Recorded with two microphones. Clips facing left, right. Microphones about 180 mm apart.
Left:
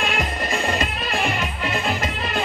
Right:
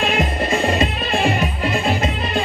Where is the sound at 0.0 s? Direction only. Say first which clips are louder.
Right 5 dB; 30° right (ahead or behind).